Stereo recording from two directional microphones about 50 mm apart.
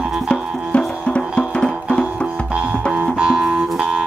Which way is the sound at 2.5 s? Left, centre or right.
Right.